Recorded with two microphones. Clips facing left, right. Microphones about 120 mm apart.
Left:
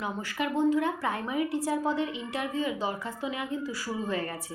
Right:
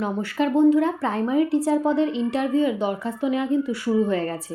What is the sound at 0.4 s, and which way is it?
A woman's voice, 25° right (ahead or behind).